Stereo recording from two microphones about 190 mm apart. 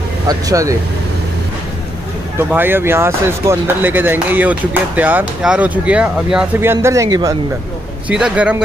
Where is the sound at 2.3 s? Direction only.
10° right (ahead or behind).